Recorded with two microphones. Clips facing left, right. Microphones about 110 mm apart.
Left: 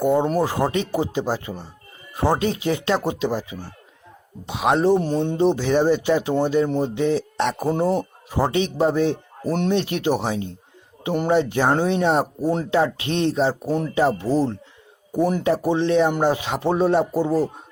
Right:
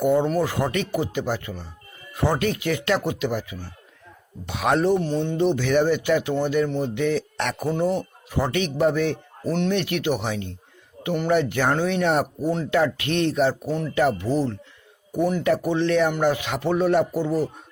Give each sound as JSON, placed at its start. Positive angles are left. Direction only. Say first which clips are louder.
{"t": 0.3, "sound": "speech", "louder": "left 2 dB", "side_deg": 35}
{"t": 4.9, "sound": "speech", "louder": "left 3 dB", "side_deg": 35}
{"t": 9.5, "sound": "speech", "louder": "left 2 dB", "side_deg": 40}
{"t": 9.7, "sound": "speech", "louder": "left 2 dB", "side_deg": 30}